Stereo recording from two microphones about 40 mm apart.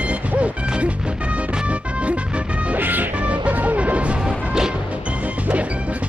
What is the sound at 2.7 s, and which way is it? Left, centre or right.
Music, right.